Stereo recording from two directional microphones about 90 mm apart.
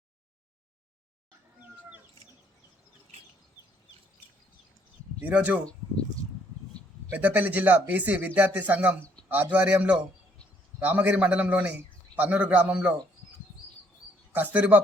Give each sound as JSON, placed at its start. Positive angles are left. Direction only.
{"t": 5.2, "sound": "speech", "side_deg": -15}
{"t": 7.1, "sound": "speech", "side_deg": -20}
{"t": 14.3, "sound": "speech", "side_deg": -15}